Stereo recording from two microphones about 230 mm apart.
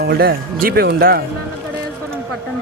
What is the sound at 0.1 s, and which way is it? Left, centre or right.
Speech, right.